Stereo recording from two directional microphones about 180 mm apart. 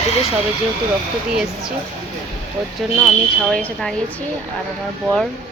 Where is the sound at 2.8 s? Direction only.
Centre (ahead or behind).